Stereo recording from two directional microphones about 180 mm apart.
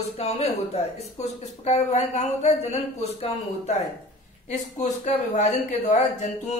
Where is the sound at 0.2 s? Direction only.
35° left (ahead or behind).